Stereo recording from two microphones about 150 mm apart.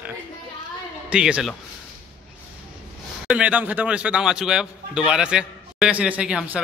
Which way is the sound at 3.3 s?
10° right (ahead or behind).